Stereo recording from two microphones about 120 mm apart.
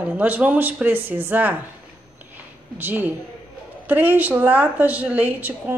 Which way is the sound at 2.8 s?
15° right (ahead or behind).